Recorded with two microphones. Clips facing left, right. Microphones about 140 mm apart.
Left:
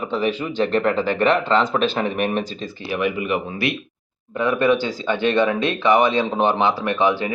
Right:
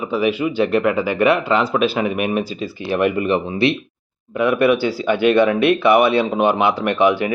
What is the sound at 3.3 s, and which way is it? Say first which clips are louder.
Speech: right 5 dB; 25° right (ahead or behind).